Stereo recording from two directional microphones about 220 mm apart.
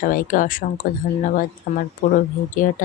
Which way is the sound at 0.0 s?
40° left (ahead or behind).